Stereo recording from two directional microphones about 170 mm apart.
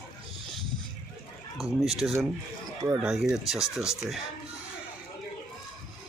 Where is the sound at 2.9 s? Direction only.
5° right (ahead or behind).